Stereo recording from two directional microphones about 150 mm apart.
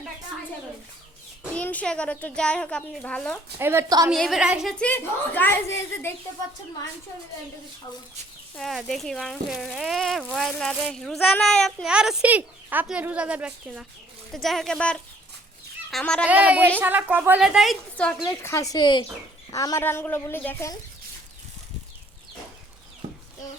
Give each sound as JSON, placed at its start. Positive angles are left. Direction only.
{"t": 1.5, "sound": "a child's voice", "side_deg": 10}
{"t": 3.6, "sound": "a woman's voice", "side_deg": -15}
{"t": 4.1, "sound": "speech", "side_deg": 0}
{"t": 4.8, "sound": "a child's voice", "side_deg": 10}
{"t": 8.5, "sound": "a child's voice", "side_deg": 0}
{"t": 16.2, "sound": "a child's voice", "side_deg": -10}
{"t": 18.3, "sound": "a child's voice", "side_deg": 20}